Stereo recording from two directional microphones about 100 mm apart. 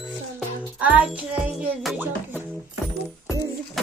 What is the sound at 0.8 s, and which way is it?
Music, 15° right (ahead or behind).